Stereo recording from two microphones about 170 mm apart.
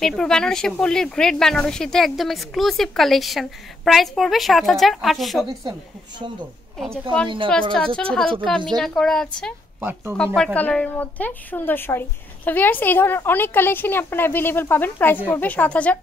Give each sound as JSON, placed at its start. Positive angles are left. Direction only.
{"t": 0.0, "sound": "speech", "side_deg": 5}
{"t": 5.5, "sound": "a woman's voice", "side_deg": -25}
{"t": 7.7, "sound": "speech", "side_deg": 5}
{"t": 9.8, "sound": "speech", "side_deg": -15}
{"t": 10.1, "sound": "speech", "side_deg": 5}